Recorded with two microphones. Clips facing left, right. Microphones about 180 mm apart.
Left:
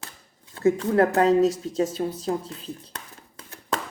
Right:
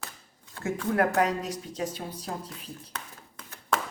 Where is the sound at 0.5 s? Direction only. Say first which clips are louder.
Left 7 dB; 25° left (ahead or behind).